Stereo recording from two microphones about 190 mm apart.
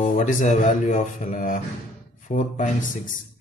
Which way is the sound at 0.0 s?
40° left (ahead or behind).